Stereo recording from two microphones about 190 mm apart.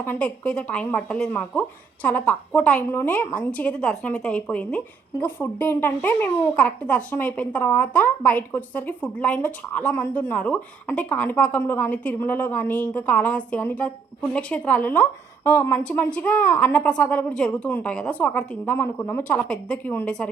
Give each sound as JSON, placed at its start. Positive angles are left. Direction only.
{"t": 0.0, "sound": "speech", "side_deg": 10}